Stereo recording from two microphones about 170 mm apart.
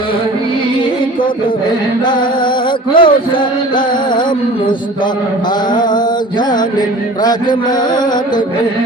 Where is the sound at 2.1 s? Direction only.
25° left (ahead or behind).